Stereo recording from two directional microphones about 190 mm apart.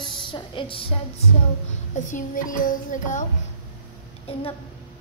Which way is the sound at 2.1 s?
45° left (ahead or behind).